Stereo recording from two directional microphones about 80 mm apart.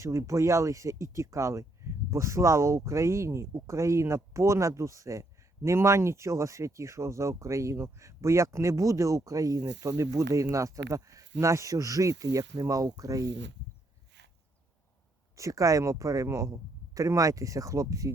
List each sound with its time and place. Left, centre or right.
0.0 s speech: right
15.4 s speech: right